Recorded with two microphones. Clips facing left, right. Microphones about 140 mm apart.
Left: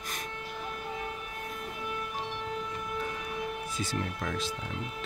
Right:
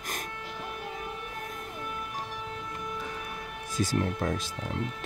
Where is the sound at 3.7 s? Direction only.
40° right (ahead or behind).